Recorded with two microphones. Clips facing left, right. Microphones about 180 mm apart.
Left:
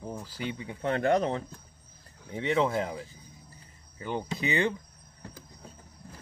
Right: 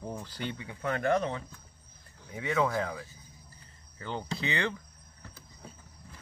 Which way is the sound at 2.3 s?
25° left (ahead or behind).